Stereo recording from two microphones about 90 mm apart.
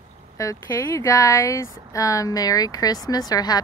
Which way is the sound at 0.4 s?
35° left (ahead or behind).